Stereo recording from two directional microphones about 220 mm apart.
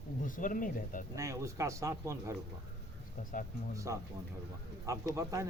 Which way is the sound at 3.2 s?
40° left (ahead or behind).